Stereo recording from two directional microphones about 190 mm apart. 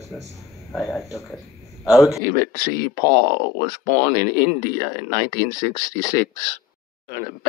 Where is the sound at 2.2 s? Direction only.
50° right (ahead or behind).